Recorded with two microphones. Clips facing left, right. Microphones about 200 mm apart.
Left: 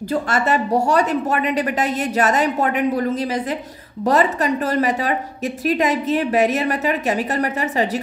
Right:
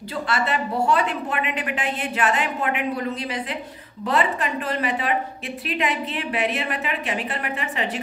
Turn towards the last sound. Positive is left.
turn(degrees=40)  # may be behind; listen again after turning